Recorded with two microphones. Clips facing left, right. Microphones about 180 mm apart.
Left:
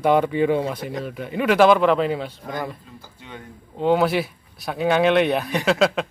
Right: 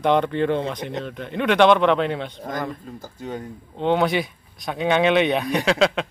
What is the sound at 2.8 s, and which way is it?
Speech, 45° right (ahead or behind).